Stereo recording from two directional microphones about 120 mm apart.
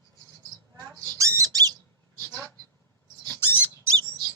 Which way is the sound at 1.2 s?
25° right (ahead or behind).